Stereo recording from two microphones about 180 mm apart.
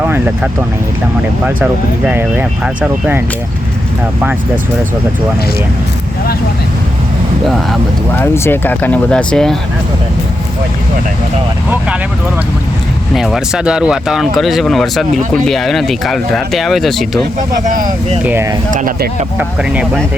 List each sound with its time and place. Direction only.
0.0 s vehicle: 10° right (ahead or behind)
2.0 s speech: 10° right (ahead or behind)
8.2 s speech: 10° left (ahead or behind)
13.1 s speech: centre (ahead or behind)
18.2 s speech: 10° right (ahead or behind)
18.7 s speech: 50° right (ahead or behind)
19.4 s speech: 10° right (ahead or behind)